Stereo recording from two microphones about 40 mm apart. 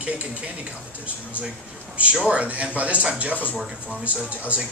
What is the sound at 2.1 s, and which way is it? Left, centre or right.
A man's voice, right.